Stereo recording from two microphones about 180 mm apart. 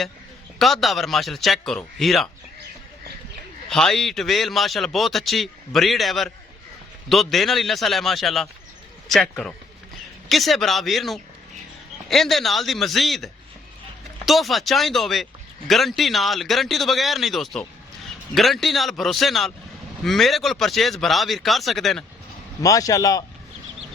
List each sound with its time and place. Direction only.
0.6 s speech: centre (ahead or behind)
3.7 s speech: 5° left (ahead or behind)
22.6 s a man's voice: 20° left (ahead or behind)